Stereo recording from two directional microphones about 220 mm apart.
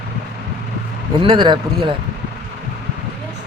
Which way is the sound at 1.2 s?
20° right (ahead or behind).